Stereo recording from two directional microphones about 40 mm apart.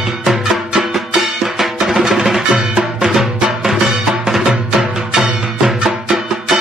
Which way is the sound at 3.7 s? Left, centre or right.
Centre.